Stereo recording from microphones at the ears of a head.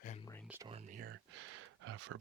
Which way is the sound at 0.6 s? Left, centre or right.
Right.